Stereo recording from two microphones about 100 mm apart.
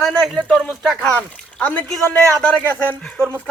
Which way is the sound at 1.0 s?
15° left (ahead or behind).